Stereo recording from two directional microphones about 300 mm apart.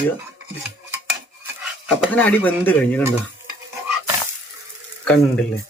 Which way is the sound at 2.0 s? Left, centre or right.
Centre.